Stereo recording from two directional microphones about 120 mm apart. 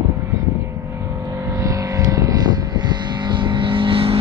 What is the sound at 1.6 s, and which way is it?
Vehicle, 25° right (ahead or behind).